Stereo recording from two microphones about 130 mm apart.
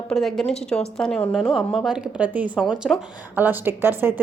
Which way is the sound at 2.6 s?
Centre (ahead or behind).